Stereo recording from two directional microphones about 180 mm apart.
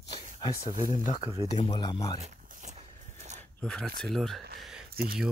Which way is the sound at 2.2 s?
45° right (ahead or behind).